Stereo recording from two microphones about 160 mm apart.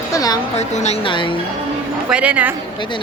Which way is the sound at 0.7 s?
45° left (ahead or behind).